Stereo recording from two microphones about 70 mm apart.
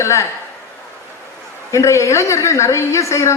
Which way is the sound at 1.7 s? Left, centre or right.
Left.